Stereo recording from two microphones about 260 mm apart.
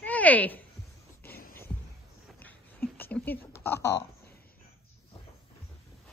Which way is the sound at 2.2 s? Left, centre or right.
Centre.